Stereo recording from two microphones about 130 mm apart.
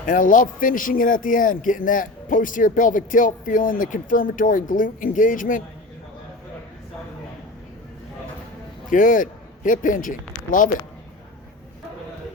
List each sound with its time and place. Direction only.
0.0 s speech: 90° left
8.9 s a man's voice: 90° left